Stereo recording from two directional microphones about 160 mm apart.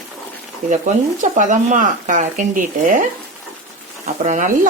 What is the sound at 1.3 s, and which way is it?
Speech, 50° right (ahead or behind).